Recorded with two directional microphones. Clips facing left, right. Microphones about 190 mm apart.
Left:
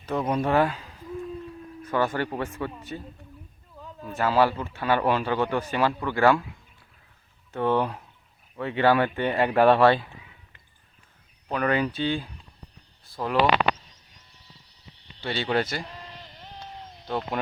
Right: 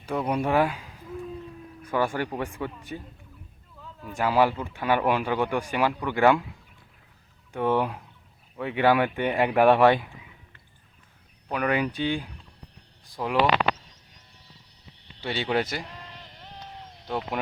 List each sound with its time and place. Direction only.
0.0 s speech: 10° right (ahead or behind)
4.1 s speech: 15° right (ahead or behind)
7.5 s speech: 10° right (ahead or behind)
11.5 s speech: 10° right (ahead or behind)
15.2 s speech: 15° right (ahead or behind)
17.1 s speech: 10° right (ahead or behind)